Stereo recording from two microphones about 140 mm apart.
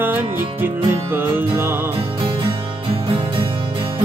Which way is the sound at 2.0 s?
40° right (ahead or behind).